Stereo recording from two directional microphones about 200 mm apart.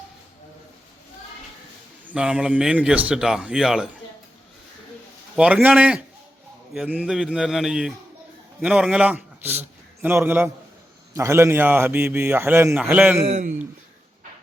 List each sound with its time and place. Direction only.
2.0 s speech: 5° right (ahead or behind)
5.4 s a man's voice: 5° right (ahead or behind)
13.2 s a man's voice: 35° right (ahead or behind)